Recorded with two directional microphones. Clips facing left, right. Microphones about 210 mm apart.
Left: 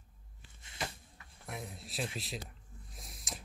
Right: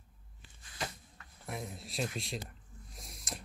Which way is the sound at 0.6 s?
25° left (ahead or behind).